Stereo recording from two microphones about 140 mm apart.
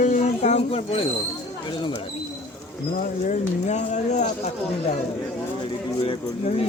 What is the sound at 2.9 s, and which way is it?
Speech, 60° left (ahead or behind).